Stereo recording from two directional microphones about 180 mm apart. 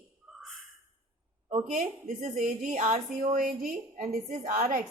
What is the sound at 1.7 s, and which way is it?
A woman's voice, 50° right (ahead or behind).